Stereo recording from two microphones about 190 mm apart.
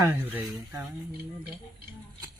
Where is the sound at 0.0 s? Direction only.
10° right (ahead or behind).